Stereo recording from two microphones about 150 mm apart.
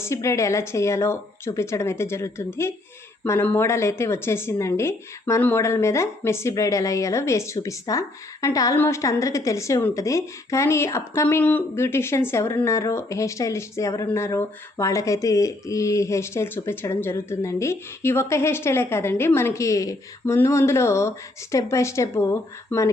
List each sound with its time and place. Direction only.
0.0 s a woman's voice: 20° left (ahead or behind)